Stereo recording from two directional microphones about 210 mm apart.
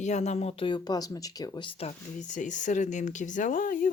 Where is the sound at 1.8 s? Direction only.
35° left (ahead or behind).